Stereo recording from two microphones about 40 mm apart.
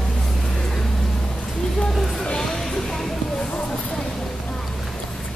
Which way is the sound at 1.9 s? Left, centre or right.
Centre.